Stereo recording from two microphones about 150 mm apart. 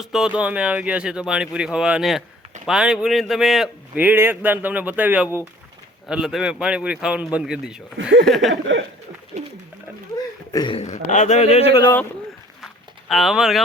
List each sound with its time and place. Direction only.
0.0 s speech: 5° right (ahead or behind)
9.3 s speech: 50° right (ahead or behind)
10.5 s speech: 30° left (ahead or behind)
10.8 s a man's voice: 50° left (ahead or behind)
12.6 s a sound: centre (ahead or behind)